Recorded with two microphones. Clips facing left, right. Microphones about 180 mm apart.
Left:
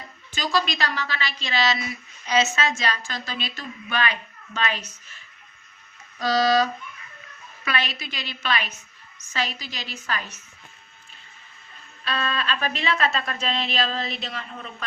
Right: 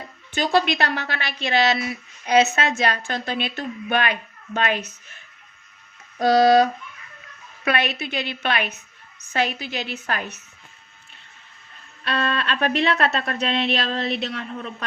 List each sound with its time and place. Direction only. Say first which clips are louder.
0.3 s a woman's voice: right 5 dB; 60° right (ahead or behind)
12.0 s a woman's voice: right 3 dB; 60° right (ahead or behind)